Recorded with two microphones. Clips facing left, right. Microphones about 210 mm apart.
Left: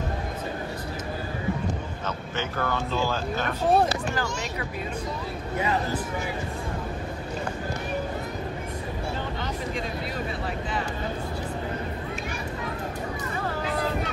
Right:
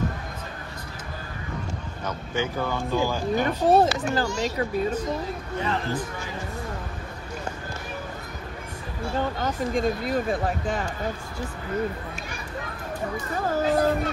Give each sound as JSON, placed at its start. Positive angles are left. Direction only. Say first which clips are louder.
{"t": 2.0, "sound": "speech", "louder": "right 5 dB", "side_deg": -10}
{"t": 4.1, "sound": "speech", "louder": "right 4 dB", "side_deg": -35}
{"t": 9.4, "sound": "speech", "louder": "right 6 dB", "side_deg": -45}
{"t": 13.5, "sound": "a sound", "louder": "right 9 dB", "side_deg": -40}